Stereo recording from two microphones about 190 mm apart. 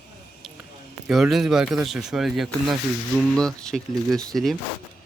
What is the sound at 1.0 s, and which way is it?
Speech, centre (ahead or behind).